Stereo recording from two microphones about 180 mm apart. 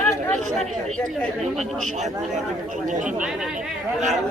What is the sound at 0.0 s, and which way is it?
Chatter, 5° left (ahead or behind).